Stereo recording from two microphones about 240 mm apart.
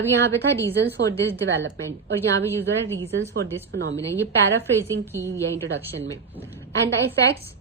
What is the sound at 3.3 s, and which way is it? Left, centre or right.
Speech, centre.